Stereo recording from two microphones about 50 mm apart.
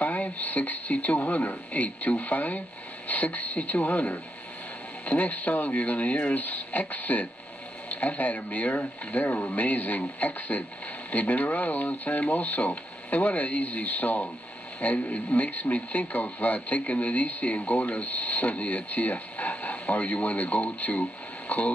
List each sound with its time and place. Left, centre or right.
0.0 s a man's voice: left